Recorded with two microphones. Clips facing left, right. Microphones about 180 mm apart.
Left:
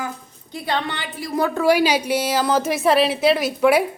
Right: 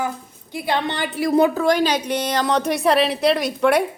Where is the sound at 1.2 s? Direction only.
70° right (ahead or behind).